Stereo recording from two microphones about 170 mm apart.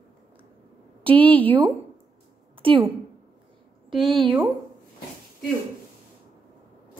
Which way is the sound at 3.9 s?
Centre (ahead or behind).